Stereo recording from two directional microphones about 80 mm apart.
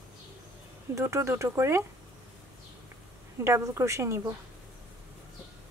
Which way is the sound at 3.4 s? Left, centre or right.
Right.